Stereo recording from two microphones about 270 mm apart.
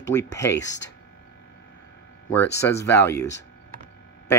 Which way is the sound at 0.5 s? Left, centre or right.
Left.